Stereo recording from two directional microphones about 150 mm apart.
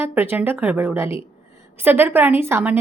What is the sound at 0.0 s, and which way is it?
A woman's voice, 15° right (ahead or behind).